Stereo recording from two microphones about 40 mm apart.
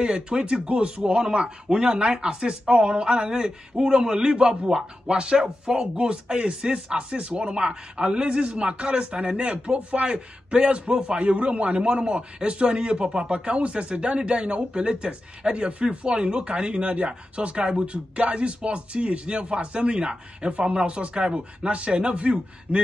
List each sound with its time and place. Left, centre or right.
0.0 s a man's voice: right